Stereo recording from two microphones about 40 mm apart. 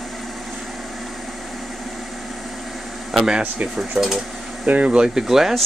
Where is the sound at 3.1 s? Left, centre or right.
Centre.